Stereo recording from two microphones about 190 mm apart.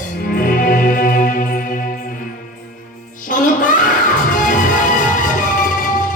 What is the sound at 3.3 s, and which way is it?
Music, 45° left (ahead or behind).